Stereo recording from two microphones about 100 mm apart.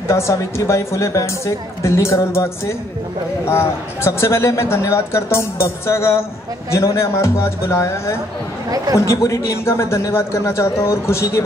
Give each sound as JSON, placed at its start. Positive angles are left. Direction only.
{"t": 0.1, "sound": "a man's voice", "side_deg": 30}
{"t": 8.6, "sound": "speech", "side_deg": -35}
{"t": 8.9, "sound": "a man's voice", "side_deg": 30}